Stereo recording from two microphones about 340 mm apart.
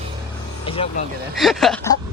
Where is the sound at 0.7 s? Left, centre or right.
Centre.